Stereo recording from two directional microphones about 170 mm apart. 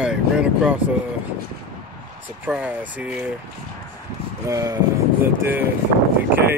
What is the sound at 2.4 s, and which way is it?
Speech, 10° right (ahead or behind).